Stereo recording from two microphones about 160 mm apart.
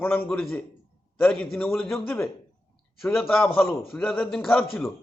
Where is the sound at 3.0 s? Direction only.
Centre (ahead or behind).